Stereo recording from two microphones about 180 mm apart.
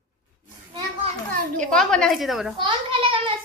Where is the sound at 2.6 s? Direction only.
30° right (ahead or behind).